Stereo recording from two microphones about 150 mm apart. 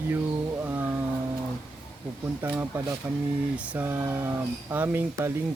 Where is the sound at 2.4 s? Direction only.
15° right (ahead or behind).